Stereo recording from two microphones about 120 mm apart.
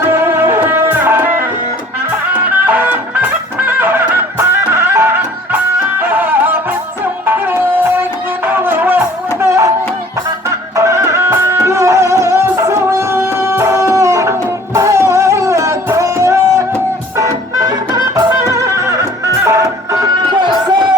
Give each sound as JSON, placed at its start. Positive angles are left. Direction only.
{"t": 0.0, "sound": "music", "side_deg": -20}
{"t": 2.6, "sound": "music", "side_deg": -15}
{"t": 10.8, "sound": "music", "side_deg": -25}